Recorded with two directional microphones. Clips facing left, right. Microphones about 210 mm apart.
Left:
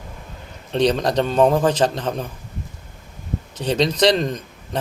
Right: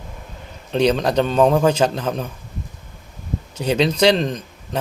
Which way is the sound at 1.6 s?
35° left (ahead or behind).